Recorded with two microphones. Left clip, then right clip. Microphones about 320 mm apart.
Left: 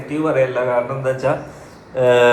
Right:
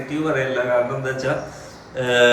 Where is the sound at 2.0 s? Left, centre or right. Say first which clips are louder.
Left 4 dB; centre.